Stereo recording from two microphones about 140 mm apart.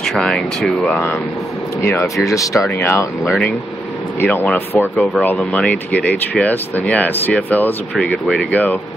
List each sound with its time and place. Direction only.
0.0 s speech: 5° left (ahead or behind)
4.2 s speech: 15° left (ahead or behind)
4.9 s speech: centre (ahead or behind)